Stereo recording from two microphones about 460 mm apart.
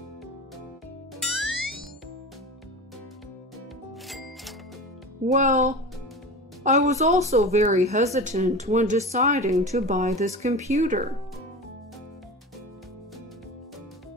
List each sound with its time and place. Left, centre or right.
1.2 s music: centre
5.2 s a woman's voice: centre